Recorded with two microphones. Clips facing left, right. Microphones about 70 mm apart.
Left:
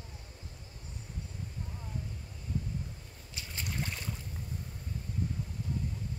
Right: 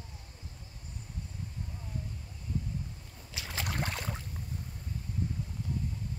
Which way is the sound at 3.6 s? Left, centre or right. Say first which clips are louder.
Right 2 dB; right.